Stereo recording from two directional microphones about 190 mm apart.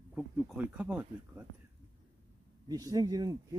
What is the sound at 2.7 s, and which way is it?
Speech, 20° right (ahead or behind).